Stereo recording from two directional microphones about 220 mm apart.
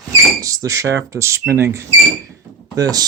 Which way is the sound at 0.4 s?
15° right (ahead or behind).